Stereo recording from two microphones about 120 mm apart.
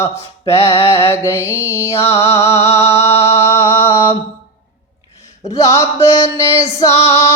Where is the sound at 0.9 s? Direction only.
20° left (ahead or behind).